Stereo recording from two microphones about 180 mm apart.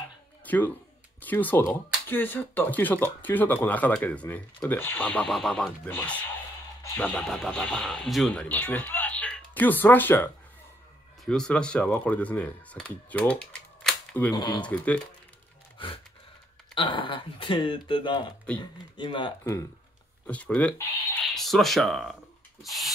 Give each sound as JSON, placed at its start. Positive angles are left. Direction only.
{"t": 0.5, "sound": "speech", "side_deg": 10}
{"t": 14.3, "sound": "speech", "side_deg": 25}
{"t": 14.6, "sound": "speech", "side_deg": 5}
{"t": 15.8, "sound": "speech", "side_deg": 30}
{"t": 20.2, "sound": "speech", "side_deg": 10}
{"t": 22.6, "sound": "a sound", "side_deg": 0}